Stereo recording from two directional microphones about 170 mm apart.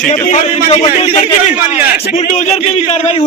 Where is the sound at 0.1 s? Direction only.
45° left (ahead or behind).